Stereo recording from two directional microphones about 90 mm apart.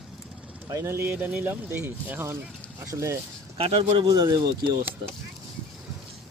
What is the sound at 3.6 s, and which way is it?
Speech, 90° right.